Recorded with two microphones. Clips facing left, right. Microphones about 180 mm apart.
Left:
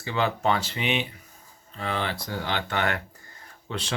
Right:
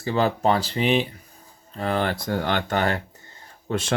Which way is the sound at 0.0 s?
40° right (ahead or behind).